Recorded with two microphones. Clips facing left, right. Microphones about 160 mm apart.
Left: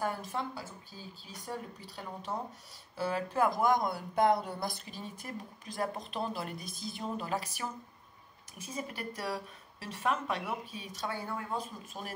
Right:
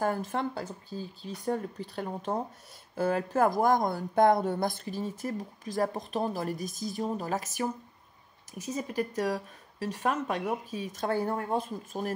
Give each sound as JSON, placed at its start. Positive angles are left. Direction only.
{"t": 0.3, "sound": "a woman's voice", "side_deg": -55}